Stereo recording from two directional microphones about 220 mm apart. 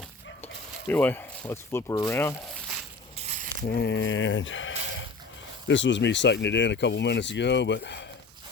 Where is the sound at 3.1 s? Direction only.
30° right (ahead or behind).